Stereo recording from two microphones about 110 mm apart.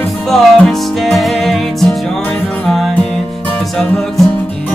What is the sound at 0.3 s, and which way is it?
Music, centre (ahead or behind).